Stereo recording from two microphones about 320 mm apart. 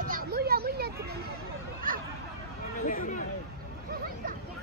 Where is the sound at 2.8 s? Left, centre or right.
Left.